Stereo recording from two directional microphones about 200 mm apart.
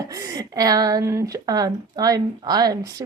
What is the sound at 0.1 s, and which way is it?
Speech, 15° right (ahead or behind).